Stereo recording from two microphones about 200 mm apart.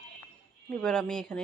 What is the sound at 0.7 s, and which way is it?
Speech, 5° left (ahead or behind).